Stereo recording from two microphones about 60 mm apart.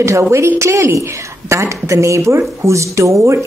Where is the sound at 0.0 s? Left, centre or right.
Right.